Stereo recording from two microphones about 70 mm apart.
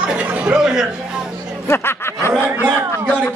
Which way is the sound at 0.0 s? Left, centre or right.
Centre.